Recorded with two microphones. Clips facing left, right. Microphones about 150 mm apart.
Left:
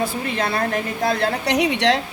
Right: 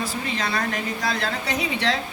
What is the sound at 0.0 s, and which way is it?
A woman's voice, 55° left (ahead or behind).